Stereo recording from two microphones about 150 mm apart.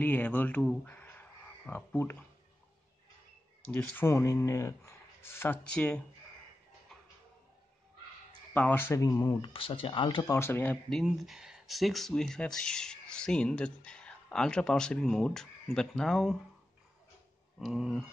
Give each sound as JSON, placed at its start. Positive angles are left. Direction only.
{"t": 0.0, "sound": "speech", "side_deg": 10}
{"t": 3.6, "sound": "speech", "side_deg": 10}
{"t": 8.5, "sound": "speech", "side_deg": 15}
{"t": 9.4, "sound": "speech", "side_deg": 35}
{"t": 10.3, "sound": "speech", "side_deg": 15}
{"t": 17.6, "sound": "speech", "side_deg": 0}